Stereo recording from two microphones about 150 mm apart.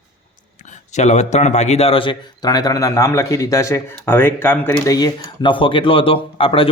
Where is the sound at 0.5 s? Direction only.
55° left (ahead or behind).